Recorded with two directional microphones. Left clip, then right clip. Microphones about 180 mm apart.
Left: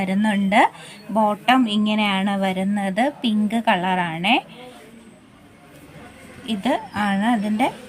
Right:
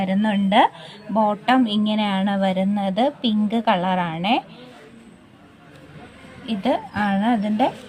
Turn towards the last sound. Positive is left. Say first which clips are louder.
# right 1 dB
turn(degrees=-30)  # may be behind; listen again after turning